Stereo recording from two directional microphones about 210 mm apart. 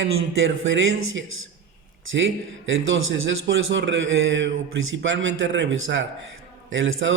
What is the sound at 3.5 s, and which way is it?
A man's voice, 60° right (ahead or behind).